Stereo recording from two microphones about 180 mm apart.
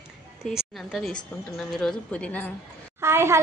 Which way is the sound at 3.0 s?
15° right (ahead or behind).